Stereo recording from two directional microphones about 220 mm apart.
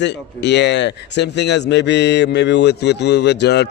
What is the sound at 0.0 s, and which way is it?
Speech, 50° left (ahead or behind).